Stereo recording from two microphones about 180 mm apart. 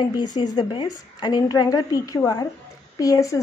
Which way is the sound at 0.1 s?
20° left (ahead or behind).